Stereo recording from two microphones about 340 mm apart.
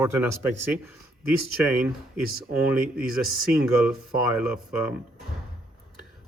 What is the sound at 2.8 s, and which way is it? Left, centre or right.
Speech, right.